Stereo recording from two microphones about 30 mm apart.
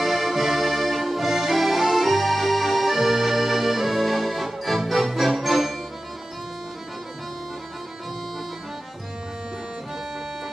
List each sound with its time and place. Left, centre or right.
0.0 s accordion: centre